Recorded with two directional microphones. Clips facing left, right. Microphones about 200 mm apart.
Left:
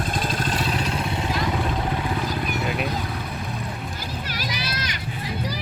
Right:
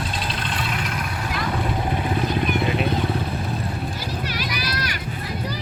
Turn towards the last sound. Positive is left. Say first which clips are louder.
# right 2 dB
turn(degrees=20)  # may be behind; listen again after turning